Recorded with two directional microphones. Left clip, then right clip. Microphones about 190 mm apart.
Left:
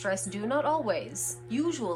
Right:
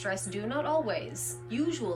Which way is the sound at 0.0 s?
10° left (ahead or behind).